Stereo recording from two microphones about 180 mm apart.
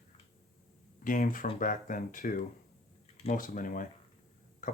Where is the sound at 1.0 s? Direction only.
50° left (ahead or behind).